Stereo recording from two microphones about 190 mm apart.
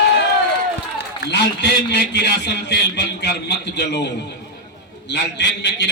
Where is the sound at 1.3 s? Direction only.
65° left (ahead or behind).